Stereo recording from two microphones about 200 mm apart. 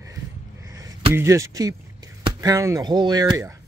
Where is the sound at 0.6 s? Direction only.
15° right (ahead or behind).